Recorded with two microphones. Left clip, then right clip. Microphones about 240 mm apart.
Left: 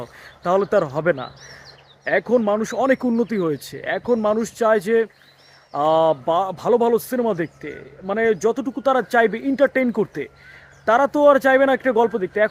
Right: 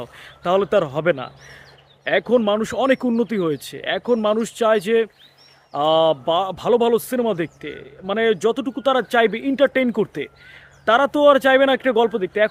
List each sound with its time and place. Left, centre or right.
0.0 s speech: centre